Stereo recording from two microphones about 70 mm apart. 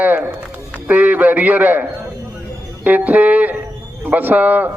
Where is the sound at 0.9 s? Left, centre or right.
Right.